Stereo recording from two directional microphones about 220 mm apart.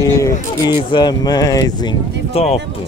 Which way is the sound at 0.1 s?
15° left (ahead or behind).